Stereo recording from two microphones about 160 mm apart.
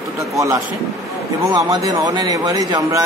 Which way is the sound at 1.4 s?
25° right (ahead or behind).